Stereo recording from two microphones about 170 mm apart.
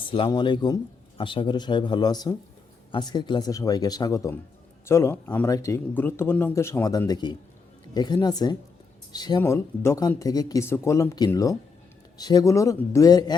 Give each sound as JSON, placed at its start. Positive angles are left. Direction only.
{"t": 0.0, "sound": "speech", "side_deg": 30}
{"t": 9.4, "sound": "speech", "side_deg": 15}